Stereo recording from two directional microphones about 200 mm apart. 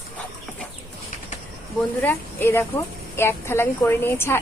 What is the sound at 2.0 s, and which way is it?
A woman's voice, 10° left (ahead or behind).